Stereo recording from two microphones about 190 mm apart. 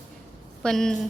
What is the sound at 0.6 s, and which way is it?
Speech, centre (ahead or behind).